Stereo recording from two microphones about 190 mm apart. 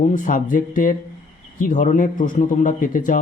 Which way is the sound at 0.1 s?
45° left (ahead or behind).